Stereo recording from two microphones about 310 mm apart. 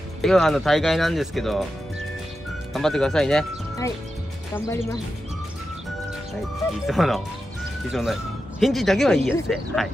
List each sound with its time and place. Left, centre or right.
0.2 s speech: centre
2.7 s speech: centre
6.9 s speech: centre